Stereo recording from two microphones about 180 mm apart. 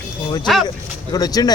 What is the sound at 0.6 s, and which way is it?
Speech, 20° left (ahead or behind).